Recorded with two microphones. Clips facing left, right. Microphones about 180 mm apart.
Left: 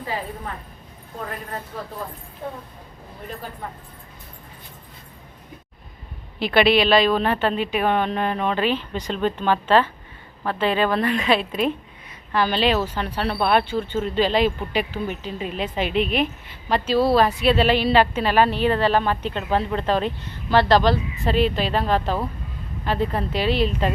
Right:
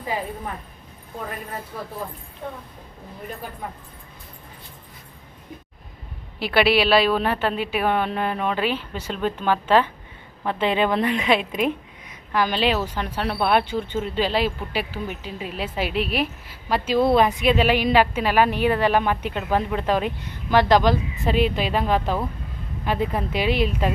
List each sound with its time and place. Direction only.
0.0 s a woman's voice: 15° right (ahead or behind)
6.4 s a woman's voice: 5° right (ahead or behind)